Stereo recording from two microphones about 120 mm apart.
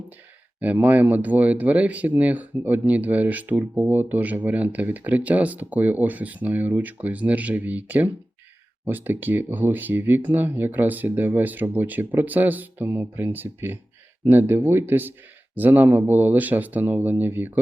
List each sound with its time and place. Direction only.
0.6 s speech: 15° right (ahead or behind)